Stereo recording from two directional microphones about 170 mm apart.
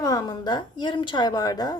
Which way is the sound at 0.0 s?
20° left (ahead or behind).